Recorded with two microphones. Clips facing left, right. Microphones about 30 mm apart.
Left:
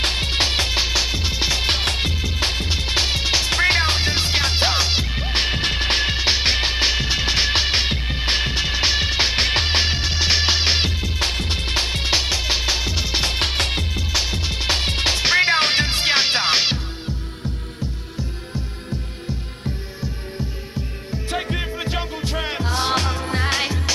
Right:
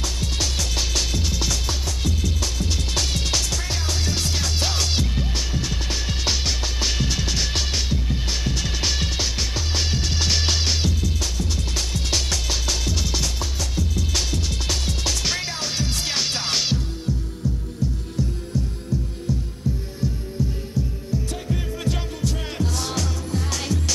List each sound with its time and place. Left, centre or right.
0.0 s music: left
1.7 s music: left
2.4 s music: left
3.5 s music: left
5.3 s music: left
6.1 s music: left
13.4 s music: left
14.1 s music: left
15.5 s music: left
21.1 s music: left